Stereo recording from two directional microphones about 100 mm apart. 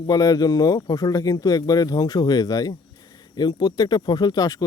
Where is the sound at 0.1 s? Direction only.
40° left (ahead or behind).